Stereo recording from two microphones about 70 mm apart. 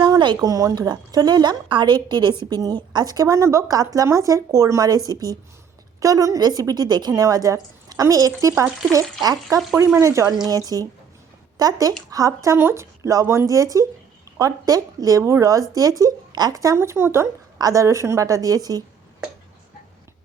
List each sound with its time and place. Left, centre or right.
0.0 s a sound: right
0.4 s a woman's voice: right
2.5 s a woman's voice: right
7.1 s a woman's voice: right
9.2 s a woman's voice: right
10.0 s speech: right
10.4 s a woman's voice: right
12.5 s a woman's voice: right
15.2 s a woman's voice: right
16.7 s speech: right
17.6 s speech: right